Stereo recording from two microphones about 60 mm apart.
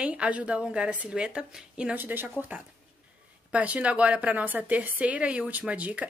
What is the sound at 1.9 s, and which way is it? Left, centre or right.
A woman's voice, right.